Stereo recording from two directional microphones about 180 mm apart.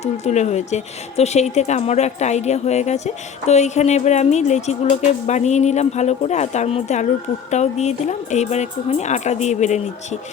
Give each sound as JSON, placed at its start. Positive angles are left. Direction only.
{"t": 0.0, "sound": "speech", "side_deg": 40}